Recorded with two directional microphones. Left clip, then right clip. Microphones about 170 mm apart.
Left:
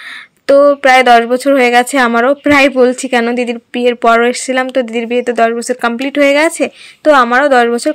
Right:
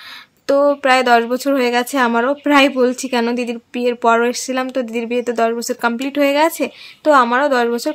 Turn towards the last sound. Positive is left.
turn(degrees=25)  # may be behind; listen again after turning